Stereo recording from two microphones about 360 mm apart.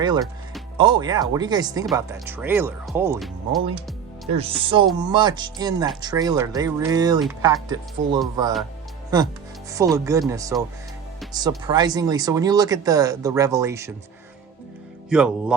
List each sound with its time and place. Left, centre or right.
0.0 s speech: centre
4.3 s speech: centre
15.1 s speech: centre